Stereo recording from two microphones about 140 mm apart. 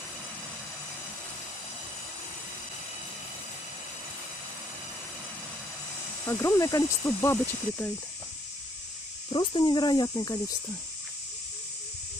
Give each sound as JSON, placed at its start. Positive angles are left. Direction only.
{"t": 6.2, "sound": "speech", "side_deg": 20}
{"t": 9.3, "sound": "speech", "side_deg": 35}